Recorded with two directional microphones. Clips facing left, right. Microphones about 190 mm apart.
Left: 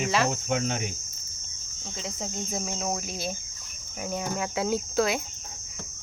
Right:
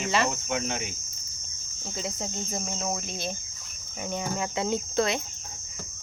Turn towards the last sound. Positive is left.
turn(degrees=5)  # may be behind; listen again after turning